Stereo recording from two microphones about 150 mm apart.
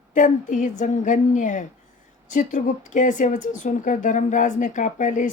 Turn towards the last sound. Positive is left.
turn(degrees=55)  # may be behind; listen again after turning